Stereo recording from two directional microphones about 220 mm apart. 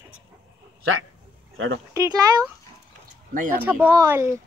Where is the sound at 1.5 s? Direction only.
60° right (ahead or behind).